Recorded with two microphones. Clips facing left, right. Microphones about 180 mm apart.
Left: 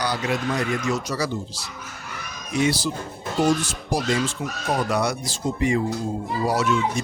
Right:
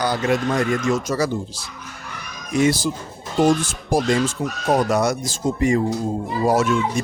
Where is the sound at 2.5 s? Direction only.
50° right (ahead or behind).